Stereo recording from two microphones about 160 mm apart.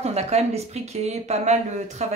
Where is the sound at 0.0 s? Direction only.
40° right (ahead or behind).